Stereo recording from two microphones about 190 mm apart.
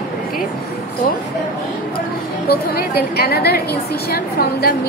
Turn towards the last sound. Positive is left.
turn(degrees=55)  # may be behind; listen again after turning